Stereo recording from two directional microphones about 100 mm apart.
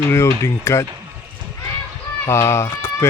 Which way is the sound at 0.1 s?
30° left (ahead or behind).